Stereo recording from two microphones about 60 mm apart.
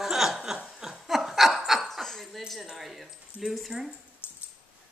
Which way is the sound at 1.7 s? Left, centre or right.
Centre.